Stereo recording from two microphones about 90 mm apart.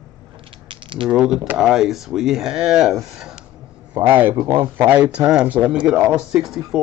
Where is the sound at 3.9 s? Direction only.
20° right (ahead or behind).